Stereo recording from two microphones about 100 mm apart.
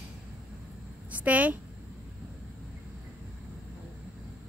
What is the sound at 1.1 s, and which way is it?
Speech, 15° right (ahead or behind).